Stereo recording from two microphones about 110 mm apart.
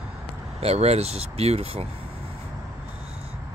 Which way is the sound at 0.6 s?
75° right (ahead or behind).